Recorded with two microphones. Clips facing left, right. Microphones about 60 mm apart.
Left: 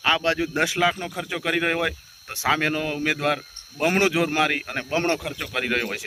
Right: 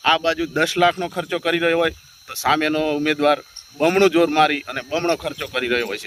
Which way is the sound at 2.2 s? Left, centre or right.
Left.